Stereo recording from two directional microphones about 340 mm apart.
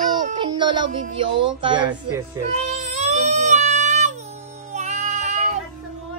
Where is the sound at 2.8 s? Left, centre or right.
Centre.